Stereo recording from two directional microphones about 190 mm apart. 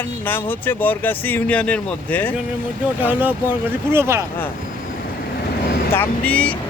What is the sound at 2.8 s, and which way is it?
Speech, 10° right (ahead or behind).